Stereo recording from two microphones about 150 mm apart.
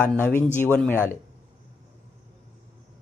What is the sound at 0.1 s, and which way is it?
Speech, 10° left (ahead or behind).